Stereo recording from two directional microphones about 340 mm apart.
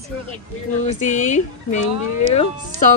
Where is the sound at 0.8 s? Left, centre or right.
Left.